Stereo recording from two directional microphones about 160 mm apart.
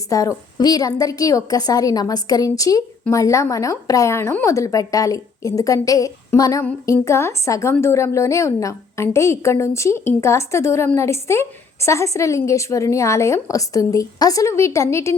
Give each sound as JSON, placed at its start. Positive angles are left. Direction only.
{"t": 0.1, "sound": "a woman's voice", "side_deg": 20}